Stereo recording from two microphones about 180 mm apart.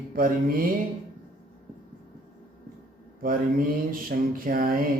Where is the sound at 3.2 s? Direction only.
55° right (ahead or behind).